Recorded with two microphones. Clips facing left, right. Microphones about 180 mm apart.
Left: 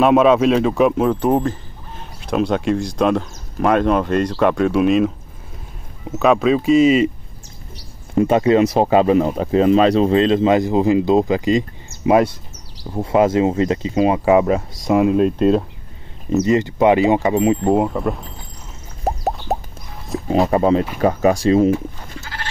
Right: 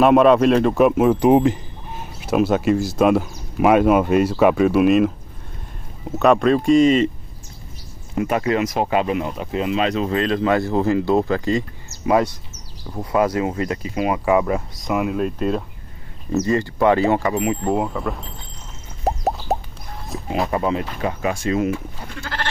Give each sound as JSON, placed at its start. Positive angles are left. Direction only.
{"t": 0.0, "sound": "a man's voice", "side_deg": 0}
{"t": 2.1, "sound": "speech", "side_deg": -5}
{"t": 8.2, "sound": "speech", "side_deg": 25}
{"t": 11.9, "sound": "basketball bounce", "side_deg": 50}
{"t": 12.9, "sound": "speech", "side_deg": 25}
{"t": 16.4, "sound": "speech", "side_deg": 20}
{"t": 17.9, "sound": "speech", "side_deg": 5}
{"t": 19.0, "sound": "plop", "side_deg": 0}
{"t": 20.5, "sound": "speech", "side_deg": 30}